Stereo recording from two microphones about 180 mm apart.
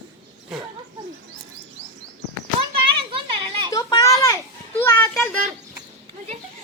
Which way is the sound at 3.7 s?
20° left (ahead or behind).